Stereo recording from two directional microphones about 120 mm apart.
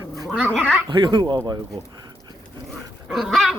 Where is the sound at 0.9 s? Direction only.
40° right (ahead or behind).